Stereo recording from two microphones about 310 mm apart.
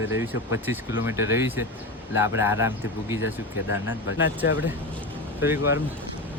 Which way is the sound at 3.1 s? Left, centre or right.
Left.